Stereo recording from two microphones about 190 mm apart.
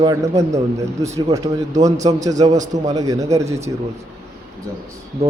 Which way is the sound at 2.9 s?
20° right (ahead or behind).